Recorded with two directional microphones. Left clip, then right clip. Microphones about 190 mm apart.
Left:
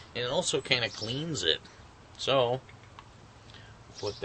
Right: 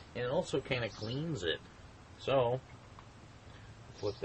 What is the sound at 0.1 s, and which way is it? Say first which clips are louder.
Speech: left 5 dB; 15° left (ahead or behind).